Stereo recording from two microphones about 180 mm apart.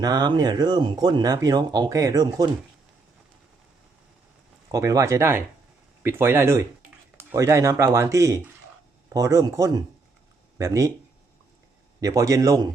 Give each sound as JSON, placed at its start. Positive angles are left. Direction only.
{"t": 0.0, "sound": "speech", "side_deg": -20}
{"t": 4.7, "sound": "speech", "side_deg": -20}
{"t": 11.9, "sound": "speech", "side_deg": -20}